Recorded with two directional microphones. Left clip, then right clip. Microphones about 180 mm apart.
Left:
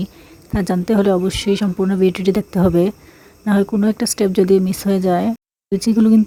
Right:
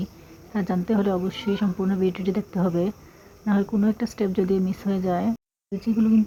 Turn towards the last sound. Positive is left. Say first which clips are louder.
# left 9 dB
turn(degrees=60)  # may be behind; listen again after turning